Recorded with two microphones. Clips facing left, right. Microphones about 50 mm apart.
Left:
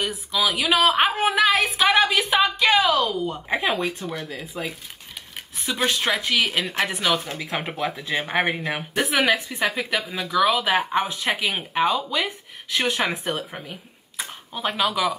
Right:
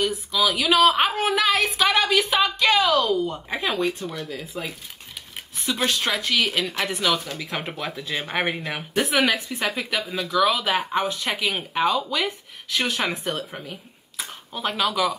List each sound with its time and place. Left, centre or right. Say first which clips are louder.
0.0 s a woman's voice: right 1 dB; centre
5.8 s a woman's voice: left 2 dB; centre
6.8 s speech: left 2 dB; left
7.5 s speech: left 4 dB; centre
8.2 s a woman's voice: left 2 dB; centre